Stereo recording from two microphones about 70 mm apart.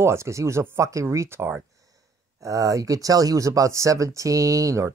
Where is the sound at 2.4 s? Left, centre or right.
Right.